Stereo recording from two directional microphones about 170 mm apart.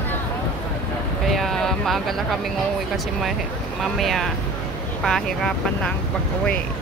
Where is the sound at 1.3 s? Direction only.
Centre (ahead or behind).